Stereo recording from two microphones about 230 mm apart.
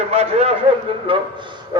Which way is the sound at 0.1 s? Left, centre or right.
Right.